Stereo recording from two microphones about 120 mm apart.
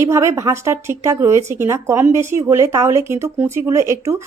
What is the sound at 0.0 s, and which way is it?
Speech, 25° right (ahead or behind).